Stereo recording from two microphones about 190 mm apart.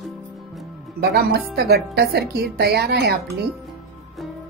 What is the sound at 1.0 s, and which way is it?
Speech, 55° right (ahead or behind).